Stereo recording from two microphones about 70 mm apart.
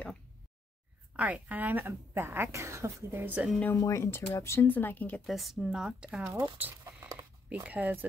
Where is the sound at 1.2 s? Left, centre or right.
Right.